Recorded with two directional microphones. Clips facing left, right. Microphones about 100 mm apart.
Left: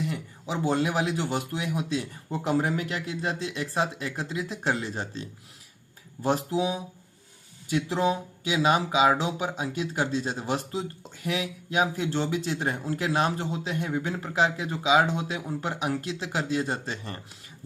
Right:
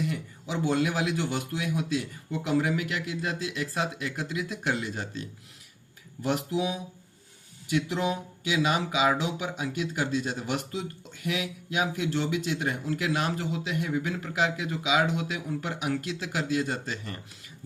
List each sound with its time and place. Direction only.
0.0 s a man's voice: 30° left (ahead or behind)